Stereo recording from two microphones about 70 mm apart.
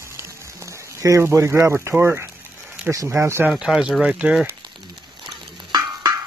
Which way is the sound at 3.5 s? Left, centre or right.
Centre.